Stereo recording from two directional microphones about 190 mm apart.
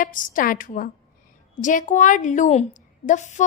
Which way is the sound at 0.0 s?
45° left (ahead or behind).